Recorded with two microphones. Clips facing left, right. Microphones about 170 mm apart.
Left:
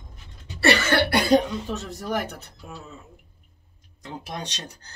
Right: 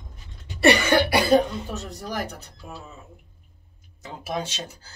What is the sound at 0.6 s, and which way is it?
Speech, 15° right (ahead or behind).